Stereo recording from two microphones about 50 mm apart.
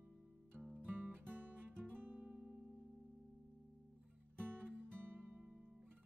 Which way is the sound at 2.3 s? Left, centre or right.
Right.